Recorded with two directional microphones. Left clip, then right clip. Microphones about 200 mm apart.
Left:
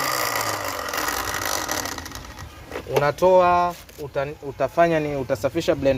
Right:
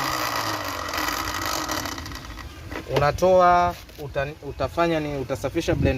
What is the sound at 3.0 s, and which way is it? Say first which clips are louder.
Speech: even; 30° left (ahead or behind).